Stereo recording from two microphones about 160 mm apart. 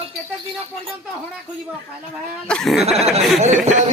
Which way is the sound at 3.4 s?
45° right (ahead or behind).